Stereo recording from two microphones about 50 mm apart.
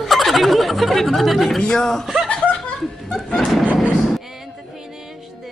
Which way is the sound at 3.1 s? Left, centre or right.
Centre.